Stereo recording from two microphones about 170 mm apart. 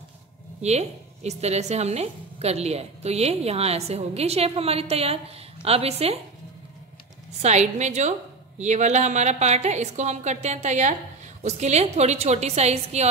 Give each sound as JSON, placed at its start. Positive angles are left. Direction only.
{"t": 0.6, "sound": "a woman's voice", "side_deg": -40}
{"t": 7.4, "sound": "a woman's voice", "side_deg": -40}